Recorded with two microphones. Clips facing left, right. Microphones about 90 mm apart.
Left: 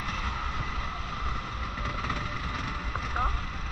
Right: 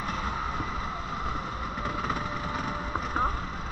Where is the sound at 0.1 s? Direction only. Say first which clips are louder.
Right 3 dB; 30° right (ahead or behind).